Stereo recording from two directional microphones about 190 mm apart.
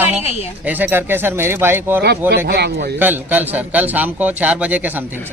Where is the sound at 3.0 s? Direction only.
10° right (ahead or behind).